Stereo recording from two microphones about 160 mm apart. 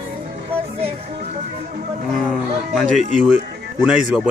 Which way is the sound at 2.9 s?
50° left (ahead or behind).